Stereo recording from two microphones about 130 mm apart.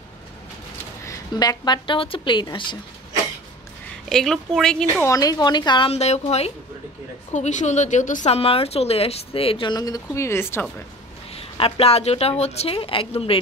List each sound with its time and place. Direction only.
1.0 s a woman's voice: 30° left (ahead or behind)
4.1 s speech: 5° left (ahead or behind)
5.0 s a woman's voice: 25° left (ahead or behind)
5.9 s a woman's voice: 55° left (ahead or behind)
7.3 s a woman's voice: 65° left (ahead or behind)
8.3 s speech: 50° left (ahead or behind); by 10.7 s 20° left (ahead or behind)
11.3 s speech: 45° left (ahead or behind)